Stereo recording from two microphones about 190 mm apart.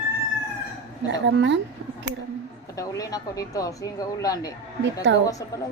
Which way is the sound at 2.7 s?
20° left (ahead or behind).